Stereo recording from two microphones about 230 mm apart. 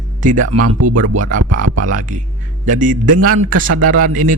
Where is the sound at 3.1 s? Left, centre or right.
Right.